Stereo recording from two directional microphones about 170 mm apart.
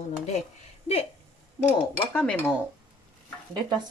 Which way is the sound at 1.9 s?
10° left (ahead or behind).